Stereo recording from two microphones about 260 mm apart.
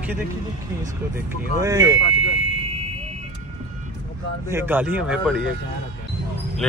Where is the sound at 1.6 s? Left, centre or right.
Centre.